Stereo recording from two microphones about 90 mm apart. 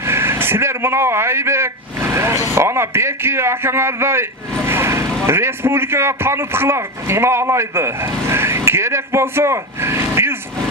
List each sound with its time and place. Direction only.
0.0 s a man's voice: 30° right (ahead or behind)